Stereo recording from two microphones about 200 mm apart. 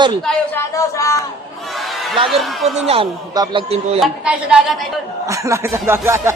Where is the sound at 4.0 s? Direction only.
5° right (ahead or behind).